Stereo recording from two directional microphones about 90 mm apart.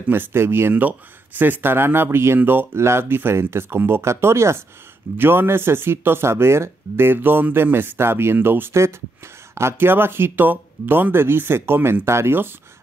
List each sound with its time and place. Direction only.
0.1 s speech: 25° right (ahead or behind)